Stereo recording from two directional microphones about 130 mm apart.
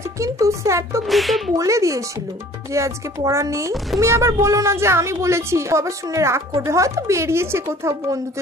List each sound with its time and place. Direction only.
0.2 s a woman's voice: 25° right (ahead or behind)
1.0 s speech: centre (ahead or behind)
1.5 s a woman's voice: 25° right (ahead or behind)